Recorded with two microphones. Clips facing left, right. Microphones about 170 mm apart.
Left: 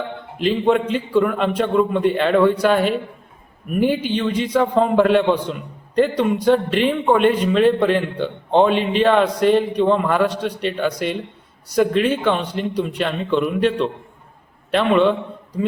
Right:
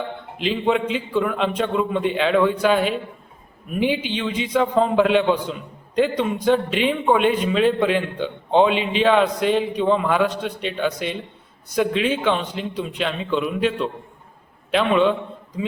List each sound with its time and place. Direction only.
0.4 s a man's voice: centre (ahead or behind)
3.9 s a man's voice: 45° left (ahead or behind)
4.2 s a man's voice: 5° right (ahead or behind)
11.8 s a man's voice: 5° right (ahead or behind)